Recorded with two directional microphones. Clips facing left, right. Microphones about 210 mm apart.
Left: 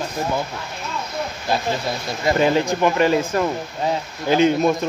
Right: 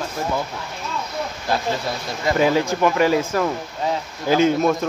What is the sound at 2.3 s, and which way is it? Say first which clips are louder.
Speech: even; 5° right (ahead or behind).